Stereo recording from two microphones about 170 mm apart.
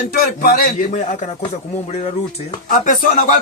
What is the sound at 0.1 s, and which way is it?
Speech, 60° left (ahead or behind).